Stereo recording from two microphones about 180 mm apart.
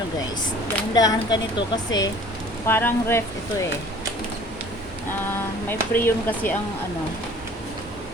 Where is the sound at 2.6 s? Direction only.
10° left (ahead or behind).